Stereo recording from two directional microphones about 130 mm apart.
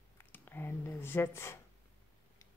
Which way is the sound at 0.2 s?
15° left (ahead or behind).